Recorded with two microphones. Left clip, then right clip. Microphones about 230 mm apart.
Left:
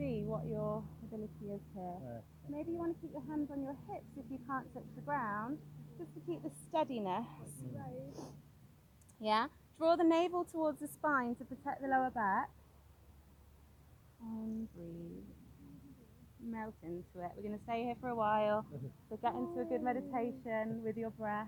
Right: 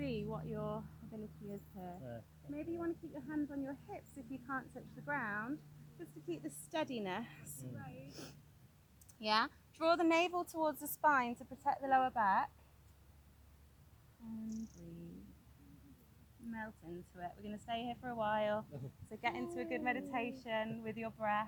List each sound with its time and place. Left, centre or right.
0.0 s a sound: right
1.8 s a woman's voice: right
16.5 s speech: right